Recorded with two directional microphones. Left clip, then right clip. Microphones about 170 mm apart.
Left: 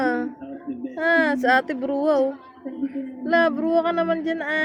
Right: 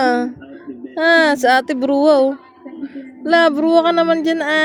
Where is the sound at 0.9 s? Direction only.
60° right (ahead or behind).